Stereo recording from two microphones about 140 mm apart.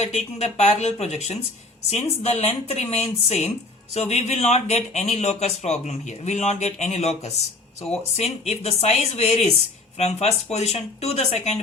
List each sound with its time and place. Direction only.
0.0 s speech: 50° left (ahead or behind)